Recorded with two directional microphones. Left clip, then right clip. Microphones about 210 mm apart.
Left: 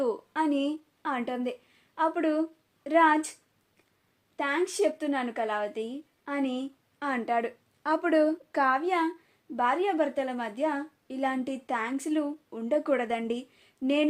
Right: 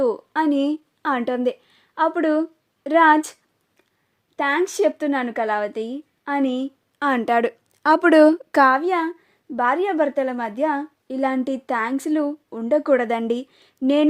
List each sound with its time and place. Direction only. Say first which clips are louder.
0.0 s a woman's voice: right 8 dB; 45° right (ahead or behind)
4.4 s speech: right 8 dB; 50° right (ahead or behind)